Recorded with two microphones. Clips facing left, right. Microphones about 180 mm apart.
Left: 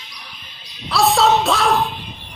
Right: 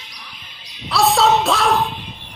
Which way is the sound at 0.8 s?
Centre (ahead or behind).